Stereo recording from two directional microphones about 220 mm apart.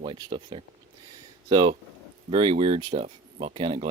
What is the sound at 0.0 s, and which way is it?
Speech, 20° right (ahead or behind).